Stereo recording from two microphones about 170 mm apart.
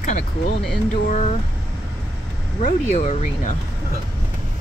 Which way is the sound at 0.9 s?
45° left (ahead or behind).